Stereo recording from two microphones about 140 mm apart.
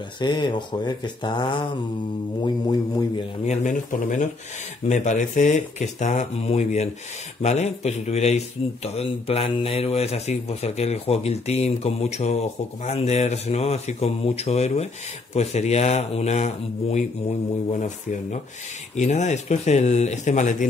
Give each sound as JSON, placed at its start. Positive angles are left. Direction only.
{"t": 0.2, "sound": "speech", "side_deg": 30}
{"t": 3.4, "sound": "a man's voice", "side_deg": 60}